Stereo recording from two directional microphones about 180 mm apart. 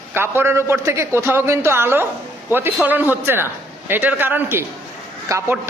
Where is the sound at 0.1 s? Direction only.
15° right (ahead or behind).